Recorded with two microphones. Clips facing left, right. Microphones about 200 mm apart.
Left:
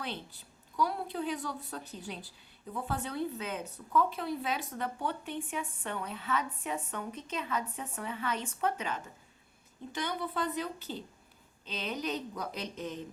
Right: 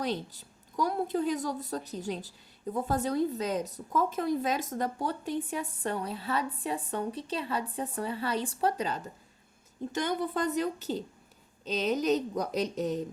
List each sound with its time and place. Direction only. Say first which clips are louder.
0.0 s a woman's voice: right 8 dB; 40° right (ahead or behind)
9.9 s a woman's voice: right 5 dB; 45° right (ahead or behind)